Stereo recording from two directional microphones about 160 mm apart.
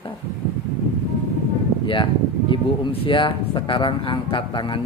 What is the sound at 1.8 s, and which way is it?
Mantra, 30° left (ahead or behind).